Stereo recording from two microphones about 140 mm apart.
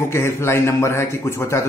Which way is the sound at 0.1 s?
20° left (ahead or behind).